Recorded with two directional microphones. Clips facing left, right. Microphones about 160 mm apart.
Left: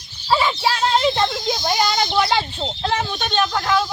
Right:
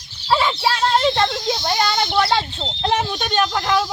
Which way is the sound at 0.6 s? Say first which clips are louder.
Right 1 dB; centre (ahead or behind).